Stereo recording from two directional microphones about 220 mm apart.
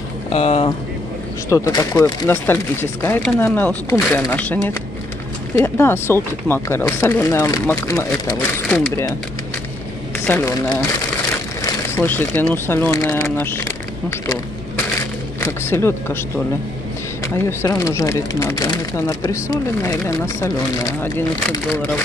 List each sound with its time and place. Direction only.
0.3 s speech: 25° left (ahead or behind)
1.5 s speech: 15° left (ahead or behind)
5.8 s speech: 10° left (ahead or behind)
10.2 s speech: 10° left (ahead or behind)
15.4 s speech: 10° left (ahead or behind)
17.5 s speech: 10° left (ahead or behind)